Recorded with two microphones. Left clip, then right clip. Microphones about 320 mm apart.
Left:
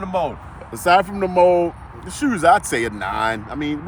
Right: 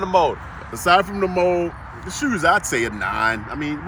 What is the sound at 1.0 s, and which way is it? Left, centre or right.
Speech, left.